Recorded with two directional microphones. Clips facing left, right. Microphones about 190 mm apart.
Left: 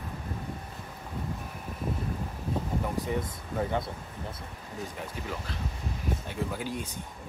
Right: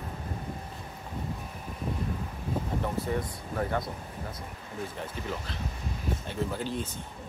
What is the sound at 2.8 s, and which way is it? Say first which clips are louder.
Speech: even; 15° left (ahead or behind).